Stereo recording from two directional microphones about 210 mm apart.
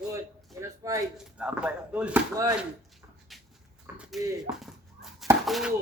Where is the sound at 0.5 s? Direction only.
15° right (ahead or behind).